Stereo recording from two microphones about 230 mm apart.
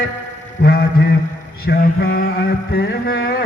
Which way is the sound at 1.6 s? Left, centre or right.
Left.